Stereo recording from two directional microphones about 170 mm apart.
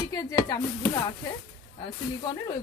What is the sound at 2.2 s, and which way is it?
Speech, 25° left (ahead or behind).